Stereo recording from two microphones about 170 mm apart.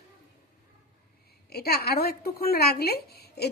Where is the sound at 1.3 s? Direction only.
70° left (ahead or behind).